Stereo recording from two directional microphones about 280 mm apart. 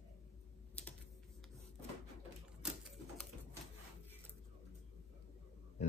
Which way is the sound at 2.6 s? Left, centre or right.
Centre.